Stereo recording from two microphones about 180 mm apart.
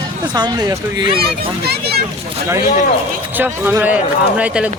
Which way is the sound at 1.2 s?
60° right (ahead or behind).